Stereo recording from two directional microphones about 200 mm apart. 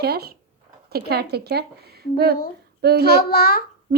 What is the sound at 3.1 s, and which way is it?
Speech, 50° left (ahead or behind).